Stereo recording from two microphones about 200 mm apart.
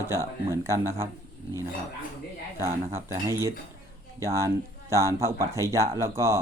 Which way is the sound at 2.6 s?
10° right (ahead or behind).